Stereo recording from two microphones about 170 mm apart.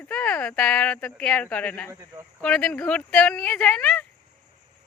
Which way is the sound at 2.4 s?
5° left (ahead or behind).